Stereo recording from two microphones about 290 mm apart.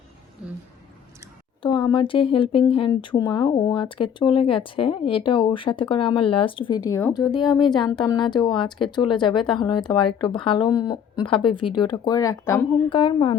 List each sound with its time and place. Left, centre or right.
1.6 s speech: centre
11.4 s speech: left
11.9 s speech: centre